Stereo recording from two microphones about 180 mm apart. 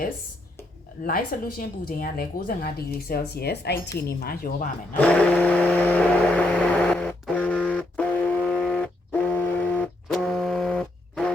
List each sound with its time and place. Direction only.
1.0 s speech: 55° left (ahead or behind)
4.9 s vehicle: 10° left (ahead or behind)
8.4 s a sound: centre (ahead or behind)